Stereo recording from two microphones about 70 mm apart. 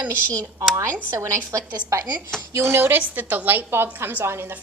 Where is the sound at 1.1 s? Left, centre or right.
Right.